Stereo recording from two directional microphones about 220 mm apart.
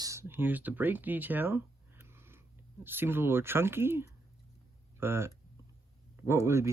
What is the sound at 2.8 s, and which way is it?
Speech, 10° right (ahead or behind).